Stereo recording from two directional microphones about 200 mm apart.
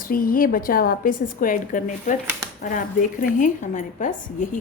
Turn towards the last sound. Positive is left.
turn(degrees=40)  # may be behind; listen again after turning